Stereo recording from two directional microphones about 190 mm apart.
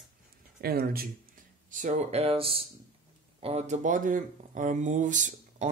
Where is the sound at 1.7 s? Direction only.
40° right (ahead or behind).